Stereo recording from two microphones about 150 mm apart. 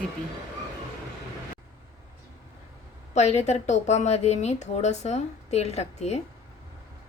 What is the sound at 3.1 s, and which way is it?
A woman's voice, 50° left (ahead or behind).